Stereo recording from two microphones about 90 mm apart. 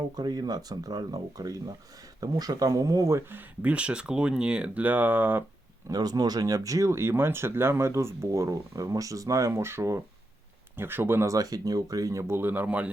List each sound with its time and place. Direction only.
0.2 s speech: 50° right (ahead or behind); by 5.4 s 20° right (ahead or behind)
5.9 s a man's voice: 45° right (ahead or behind); by 12.9 s 15° right (ahead or behind)